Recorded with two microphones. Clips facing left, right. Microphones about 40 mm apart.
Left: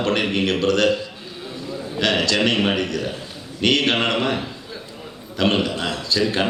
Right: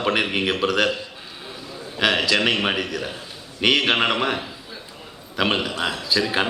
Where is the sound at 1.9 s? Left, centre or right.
Centre.